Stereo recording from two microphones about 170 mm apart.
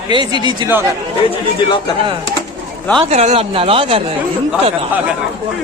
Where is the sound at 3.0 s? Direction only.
40° right (ahead or behind).